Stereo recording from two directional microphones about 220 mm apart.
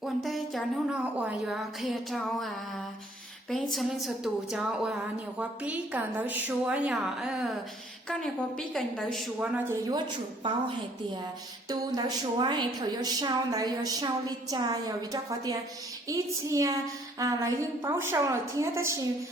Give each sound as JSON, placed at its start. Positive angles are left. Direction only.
{"t": 0.0, "sound": "a woman's voice", "side_deg": 0}
{"t": 3.5, "sound": "a woman's voice", "side_deg": 0}
{"t": 11.7, "sound": "a woman's voice", "side_deg": -15}